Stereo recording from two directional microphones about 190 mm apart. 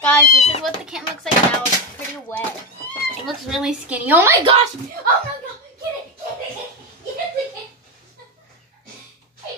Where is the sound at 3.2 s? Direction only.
Centre (ahead or behind).